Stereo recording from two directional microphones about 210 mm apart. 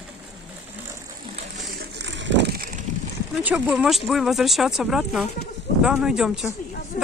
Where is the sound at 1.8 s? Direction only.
55° right (ahead or behind).